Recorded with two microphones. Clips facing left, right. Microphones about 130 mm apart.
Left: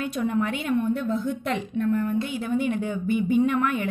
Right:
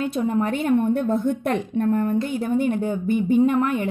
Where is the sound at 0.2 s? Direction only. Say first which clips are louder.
Right 2 dB; 30° right (ahead or behind).